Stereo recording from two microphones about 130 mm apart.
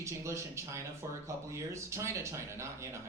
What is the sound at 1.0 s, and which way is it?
Speech, 25° right (ahead or behind).